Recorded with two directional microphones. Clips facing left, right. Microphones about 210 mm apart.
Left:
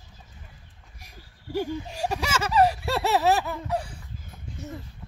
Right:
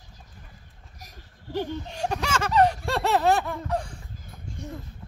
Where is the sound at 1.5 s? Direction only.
10° left (ahead or behind).